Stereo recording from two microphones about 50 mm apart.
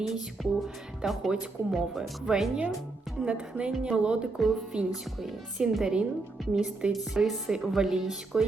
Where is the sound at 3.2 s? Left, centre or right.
Right.